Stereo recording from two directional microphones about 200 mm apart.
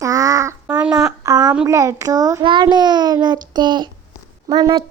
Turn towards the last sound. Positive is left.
turn(degrees=-20)  # may be behind; listen again after turning